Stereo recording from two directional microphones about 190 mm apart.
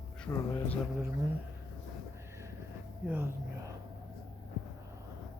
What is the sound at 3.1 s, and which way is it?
Speech, 10° right (ahead or behind).